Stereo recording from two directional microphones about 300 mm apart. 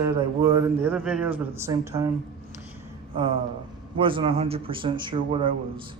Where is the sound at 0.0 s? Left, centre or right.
Centre.